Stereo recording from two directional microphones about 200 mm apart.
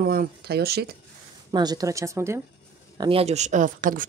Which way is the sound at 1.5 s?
20° right (ahead or behind).